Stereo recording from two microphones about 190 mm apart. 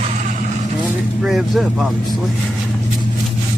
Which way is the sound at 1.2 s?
Centre (ahead or behind).